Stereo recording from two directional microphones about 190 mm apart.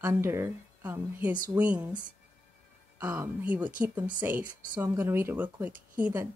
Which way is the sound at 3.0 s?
10° right (ahead or behind).